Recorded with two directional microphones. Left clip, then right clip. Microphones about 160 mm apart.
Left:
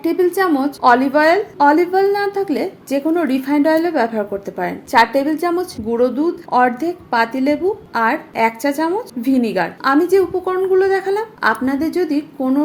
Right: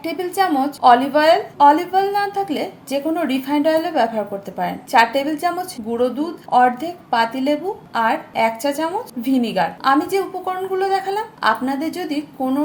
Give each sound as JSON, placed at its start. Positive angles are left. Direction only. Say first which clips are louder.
{"t": 0.0, "sound": "a woman's voice", "louder": "left 4 dB", "side_deg": 30}